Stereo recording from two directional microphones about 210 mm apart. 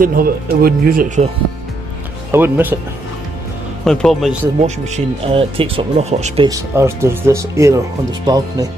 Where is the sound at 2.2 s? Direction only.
10° right (ahead or behind).